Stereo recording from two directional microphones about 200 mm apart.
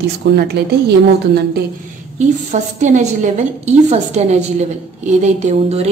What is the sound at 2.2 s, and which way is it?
A woman's voice, 35° right (ahead or behind).